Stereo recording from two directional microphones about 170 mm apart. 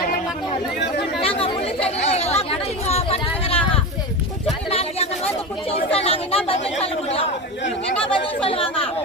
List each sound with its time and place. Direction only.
1.2 s chatter: 35° left (ahead or behind)
4.7 s a sound: 35° left (ahead or behind)
5.7 s speech: 35° left (ahead or behind)